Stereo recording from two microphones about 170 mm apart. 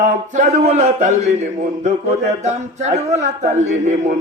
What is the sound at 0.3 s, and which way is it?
A man's voice, 40° right (ahead or behind).